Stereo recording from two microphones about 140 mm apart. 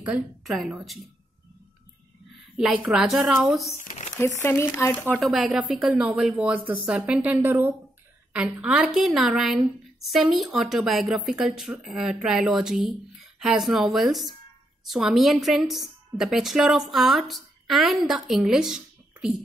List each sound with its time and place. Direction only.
0.0 s a woman's voice: 5° right (ahead or behind)
2.5 s a woman's voice: 5° right (ahead or behind)
3.8 s crumpling: 55° left (ahead or behind)
4.2 s speech: 15° left (ahead or behind)
5.1 s a woman's voice: centre (ahead or behind)